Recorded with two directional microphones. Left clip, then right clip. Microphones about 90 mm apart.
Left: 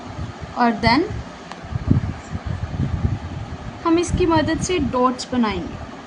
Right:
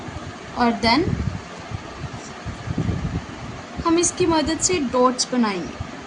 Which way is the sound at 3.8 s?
15° left (ahead or behind).